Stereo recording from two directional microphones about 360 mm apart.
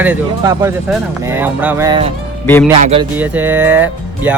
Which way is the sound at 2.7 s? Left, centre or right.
Centre.